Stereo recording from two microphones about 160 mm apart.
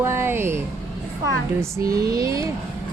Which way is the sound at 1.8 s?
75° right (ahead or behind).